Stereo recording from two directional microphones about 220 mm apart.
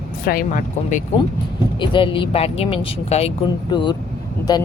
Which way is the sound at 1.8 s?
20° left (ahead or behind).